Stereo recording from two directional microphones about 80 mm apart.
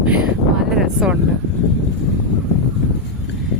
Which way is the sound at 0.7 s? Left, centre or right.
Centre.